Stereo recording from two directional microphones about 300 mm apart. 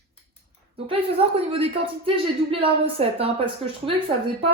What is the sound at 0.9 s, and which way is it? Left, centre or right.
A man's voice, centre.